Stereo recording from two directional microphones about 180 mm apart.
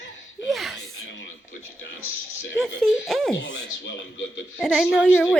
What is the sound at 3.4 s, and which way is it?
Speech, 85° left.